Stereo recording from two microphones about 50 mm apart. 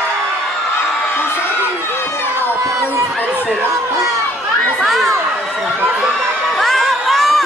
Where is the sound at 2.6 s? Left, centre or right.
Right.